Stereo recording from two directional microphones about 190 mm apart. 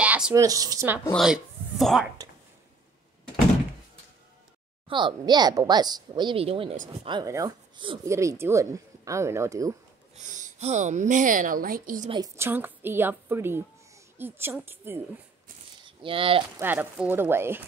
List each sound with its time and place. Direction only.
0.0 s speech: 10° right (ahead or behind)
1.1 s speech: centre (ahead or behind)
4.8 s speech: 25° right (ahead or behind)
7.1 s speech: 20° right (ahead or behind)
8.1 s speech: 15° right (ahead or behind)
10.1 s speech: 40° right (ahead or behind)
12.1 s speech: 15° right (ahead or behind)
15.8 s speech: 25° right (ahead or behind)
16.5 s speech: 10° right (ahead or behind)